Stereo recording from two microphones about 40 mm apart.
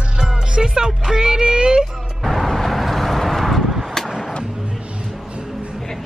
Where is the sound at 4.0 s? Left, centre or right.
Centre.